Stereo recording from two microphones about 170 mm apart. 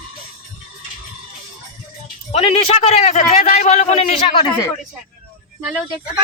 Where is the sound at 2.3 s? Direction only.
35° left (ahead or behind).